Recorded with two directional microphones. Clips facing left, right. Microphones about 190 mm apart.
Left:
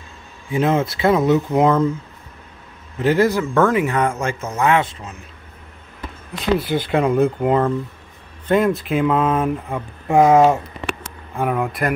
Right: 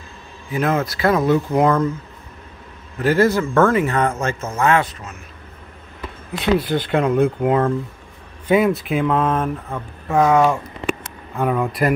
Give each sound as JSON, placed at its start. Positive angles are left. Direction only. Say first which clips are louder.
{"t": 0.5, "sound": "speech", "louder": "left 2 dB", "side_deg": 20}
{"t": 3.0, "sound": "speech", "louder": "even", "side_deg": 15}
{"t": 6.4, "sound": "speech", "louder": "right 1 dB", "side_deg": 0}
{"t": 10.0, "sound": "speech", "louder": "left 3 dB", "side_deg": 25}
{"t": 11.3, "sound": "speech", "louder": "right 1 dB", "side_deg": 10}